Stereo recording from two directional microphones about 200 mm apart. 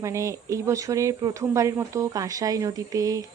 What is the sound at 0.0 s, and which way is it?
A woman's voice, 15° right (ahead or behind).